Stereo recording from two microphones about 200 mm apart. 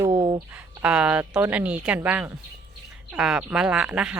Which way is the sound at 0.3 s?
15° right (ahead or behind).